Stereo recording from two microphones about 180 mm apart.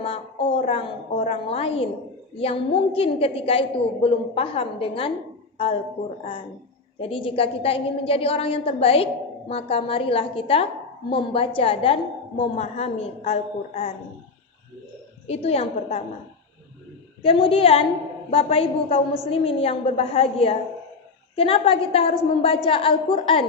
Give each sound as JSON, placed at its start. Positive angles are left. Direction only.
{"t": 0.6, "sound": "a woman's voice", "side_deg": 35}
{"t": 7.0, "sound": "a woman's voice", "side_deg": 30}
{"t": 15.3, "sound": "a woman's voice", "side_deg": 35}
{"t": 17.2, "sound": "a woman's voice", "side_deg": 30}